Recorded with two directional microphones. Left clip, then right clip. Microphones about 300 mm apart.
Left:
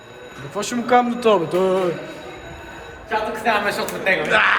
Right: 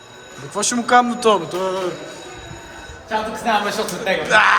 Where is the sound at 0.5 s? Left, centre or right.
Centre.